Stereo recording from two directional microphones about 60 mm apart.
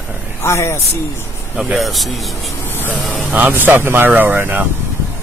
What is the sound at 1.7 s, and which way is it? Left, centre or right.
Speech, centre.